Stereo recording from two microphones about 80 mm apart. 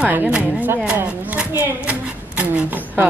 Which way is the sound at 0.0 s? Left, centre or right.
Right.